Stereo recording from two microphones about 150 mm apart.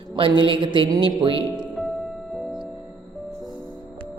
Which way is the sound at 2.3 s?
5° right (ahead or behind).